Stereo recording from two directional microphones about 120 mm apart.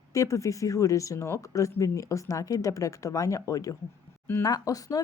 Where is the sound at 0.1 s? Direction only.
25° left (ahead or behind).